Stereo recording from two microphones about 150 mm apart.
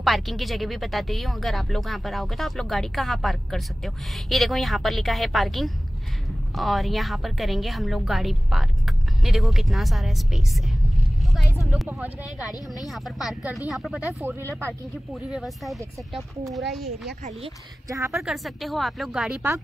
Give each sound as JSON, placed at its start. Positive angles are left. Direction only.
{"t": 0.0, "sound": "speech", "side_deg": 0}
{"t": 11.6, "sound": "speech", "side_deg": 0}
{"t": 17.8, "sound": "a woman's voice", "side_deg": -20}
{"t": 18.1, "sound": "speech", "side_deg": 0}